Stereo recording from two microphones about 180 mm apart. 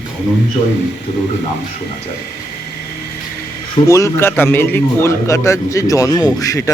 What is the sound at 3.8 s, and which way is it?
A man's voice, 15° left (ahead or behind).